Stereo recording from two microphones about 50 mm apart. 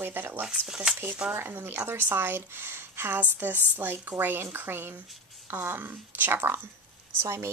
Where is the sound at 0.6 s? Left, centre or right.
Centre.